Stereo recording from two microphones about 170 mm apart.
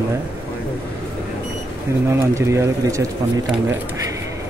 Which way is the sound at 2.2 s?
15° right (ahead or behind).